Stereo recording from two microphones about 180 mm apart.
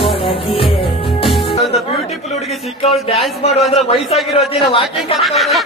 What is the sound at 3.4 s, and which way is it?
Speech, 35° left (ahead or behind).